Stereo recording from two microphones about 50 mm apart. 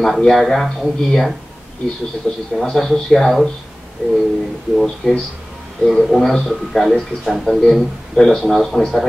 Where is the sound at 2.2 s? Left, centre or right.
Centre.